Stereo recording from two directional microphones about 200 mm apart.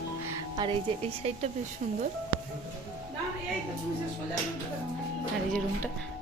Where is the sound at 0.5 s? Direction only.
20° right (ahead or behind).